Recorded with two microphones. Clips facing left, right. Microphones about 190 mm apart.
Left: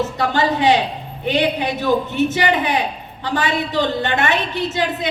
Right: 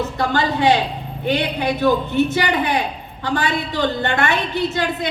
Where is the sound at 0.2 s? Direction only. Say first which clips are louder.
Even; 20° left (ahead or behind).